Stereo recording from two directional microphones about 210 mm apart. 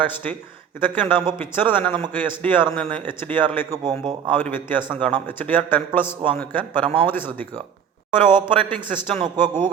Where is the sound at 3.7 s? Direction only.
20° right (ahead or behind).